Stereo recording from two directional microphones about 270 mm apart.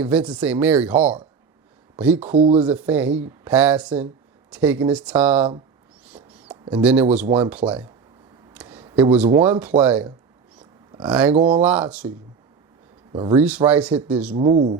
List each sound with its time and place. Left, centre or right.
0.0 s speech: centre
2.3 s speech: right
2.6 s speech: centre
6.1 s bird: centre
6.8 s speech: centre
7.3 s speech: centre
7.5 s speech: centre
8.5 s a sound: centre
9.3 s speech: centre
11.3 s speech: centre
11.6 s speech: centre
13.1 s speech: centre
13.7 s speech: centre
14.3 s speech: right